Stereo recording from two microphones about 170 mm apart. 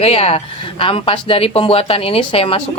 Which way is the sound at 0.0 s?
35° left (ahead or behind).